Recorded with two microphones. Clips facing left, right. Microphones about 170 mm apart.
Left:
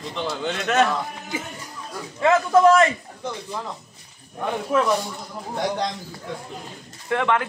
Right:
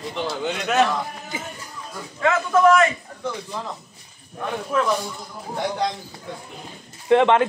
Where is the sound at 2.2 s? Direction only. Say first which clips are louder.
Left 2 dB; 30° left (ahead or behind).